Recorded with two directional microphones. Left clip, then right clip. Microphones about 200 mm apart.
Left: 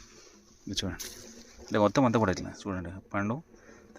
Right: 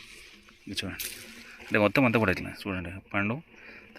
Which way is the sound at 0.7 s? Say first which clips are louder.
Even; 25° left (ahead or behind).